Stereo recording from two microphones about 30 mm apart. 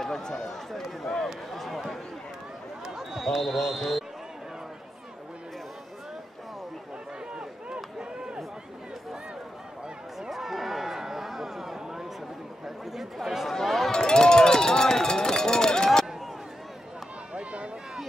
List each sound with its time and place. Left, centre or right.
0.0 s speech: centre
1.0 s a sound: centre
3.3 s speech: centre
7.3 s run: right
10.3 s a sound: centre
12.6 s chatter: centre
13.7 s chink: centre
13.9 s run: left
17.3 s a sound: right